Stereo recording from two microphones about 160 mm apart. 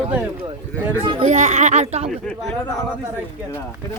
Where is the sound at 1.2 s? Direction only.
45° right (ahead or behind).